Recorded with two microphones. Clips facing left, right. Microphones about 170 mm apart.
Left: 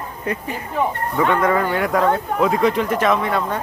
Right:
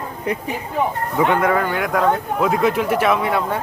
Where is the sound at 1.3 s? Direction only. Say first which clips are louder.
Left 2 dB; 5° right (ahead or behind).